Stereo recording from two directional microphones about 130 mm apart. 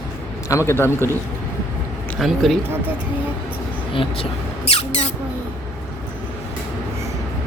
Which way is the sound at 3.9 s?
45° left (ahead or behind).